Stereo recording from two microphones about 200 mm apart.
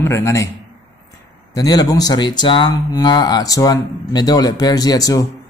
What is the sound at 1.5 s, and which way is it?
Speech, 20° left (ahead or behind).